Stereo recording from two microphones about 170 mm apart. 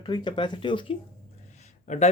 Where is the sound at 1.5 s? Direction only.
45° left (ahead or behind).